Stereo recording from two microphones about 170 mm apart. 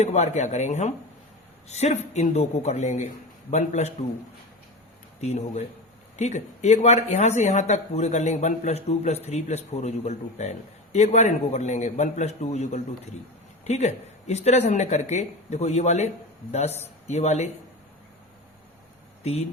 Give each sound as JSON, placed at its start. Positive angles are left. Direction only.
{"t": 0.0, "sound": "speech", "side_deg": 40}
{"t": 5.2, "sound": "speech", "side_deg": 40}
{"t": 19.2, "sound": "speech", "side_deg": 40}